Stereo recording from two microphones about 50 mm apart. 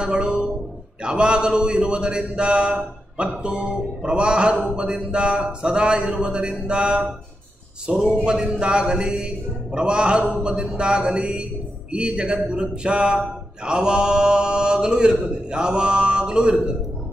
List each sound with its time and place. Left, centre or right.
0.0 s a sound: right
1.0 s a man's voice: right
13.7 s mantra: centre